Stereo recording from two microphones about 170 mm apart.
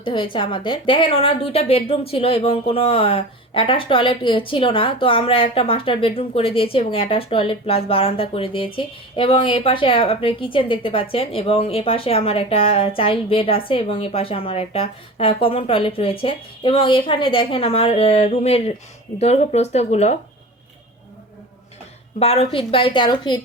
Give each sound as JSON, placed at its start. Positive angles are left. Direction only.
{"t": 0.0, "sound": "a woman's voice", "side_deg": 30}
{"t": 22.2, "sound": "a woman's voice", "side_deg": 35}